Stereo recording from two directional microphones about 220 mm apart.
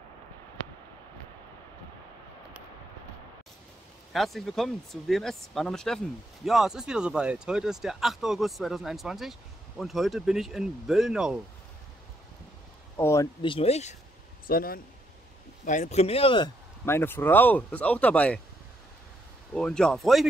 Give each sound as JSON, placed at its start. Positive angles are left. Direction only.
{"t": 4.1, "sound": "speech", "side_deg": 0}
{"t": 12.9, "sound": "speech", "side_deg": 15}
{"t": 14.5, "sound": "speech", "side_deg": 40}
{"t": 19.5, "sound": "speech", "side_deg": 5}